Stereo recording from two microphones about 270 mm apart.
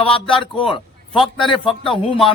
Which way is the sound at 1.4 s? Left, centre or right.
Centre.